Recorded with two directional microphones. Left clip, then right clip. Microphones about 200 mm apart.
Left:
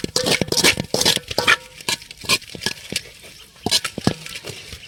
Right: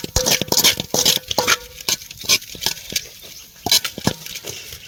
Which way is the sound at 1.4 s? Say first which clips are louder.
Left 1 dB; 10° left (ahead or behind).